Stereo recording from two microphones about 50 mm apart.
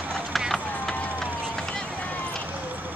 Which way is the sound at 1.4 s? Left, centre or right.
Centre.